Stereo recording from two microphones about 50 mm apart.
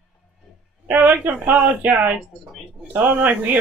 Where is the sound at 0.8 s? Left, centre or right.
Right.